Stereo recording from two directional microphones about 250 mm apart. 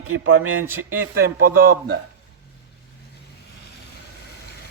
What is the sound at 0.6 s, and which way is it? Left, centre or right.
Speech, centre.